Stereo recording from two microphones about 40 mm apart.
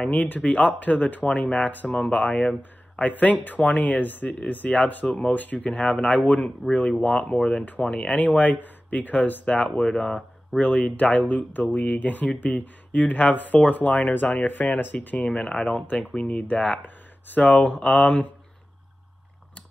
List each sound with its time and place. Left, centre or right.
0.1 s speech: left
4.3 s speech: left
5.0 s speech: left
5.3 s speech: left
6.6 s speech: left
7.1 s speech: left
7.8 s speech: left
8.2 s speech: left
9.8 s speech: centre
10.6 s speech: left
15.2 s speech: left